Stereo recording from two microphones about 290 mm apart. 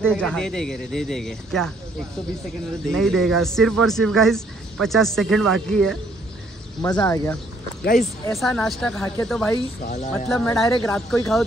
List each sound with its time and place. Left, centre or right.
0.0 s speech: centre
2.9 s speech: centre
6.8 s speech: centre
7.8 s speech: left
8.4 s speech: centre